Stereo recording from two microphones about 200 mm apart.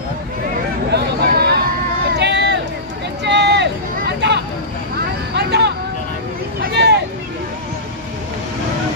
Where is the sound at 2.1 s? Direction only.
60° right (ahead or behind).